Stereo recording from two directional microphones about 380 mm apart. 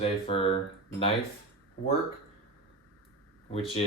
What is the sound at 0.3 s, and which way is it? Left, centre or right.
Speech, centre.